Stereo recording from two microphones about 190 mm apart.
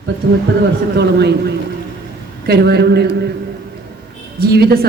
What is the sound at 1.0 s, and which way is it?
Speech, 60° right (ahead or behind).